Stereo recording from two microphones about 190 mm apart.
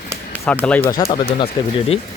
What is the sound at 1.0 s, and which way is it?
Speech, 25° left (ahead or behind).